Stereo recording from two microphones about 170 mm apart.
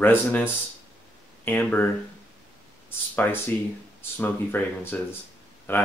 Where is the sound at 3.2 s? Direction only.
15° left (ahead or behind).